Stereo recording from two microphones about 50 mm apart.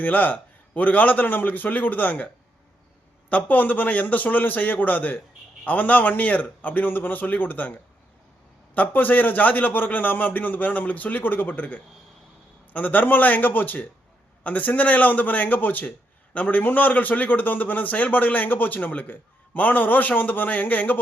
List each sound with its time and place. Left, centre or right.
0.0 s a man's voice: left
8.7 s a man's voice: left